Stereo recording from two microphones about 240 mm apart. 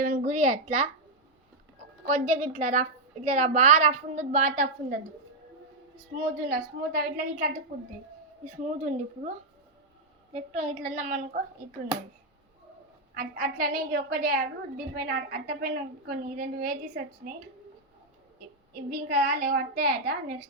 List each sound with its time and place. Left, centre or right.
0.0 s speech: right
2.0 s a woman's voice: right
6.5 s a woman's voice: right
8.6 s a woman's voice: right
10.5 s a woman's voice: right
13.1 s a woman's voice: right
18.7 s a woman's voice: right